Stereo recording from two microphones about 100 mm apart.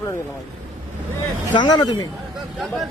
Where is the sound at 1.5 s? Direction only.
50° left (ahead or behind).